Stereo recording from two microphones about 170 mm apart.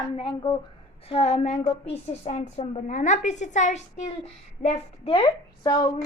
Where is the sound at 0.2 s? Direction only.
30° left (ahead or behind).